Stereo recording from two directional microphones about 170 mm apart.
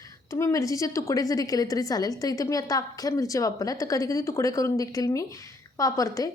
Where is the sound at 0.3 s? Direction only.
15° left (ahead or behind).